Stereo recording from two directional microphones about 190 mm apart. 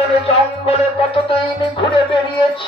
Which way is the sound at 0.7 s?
30° left (ahead or behind).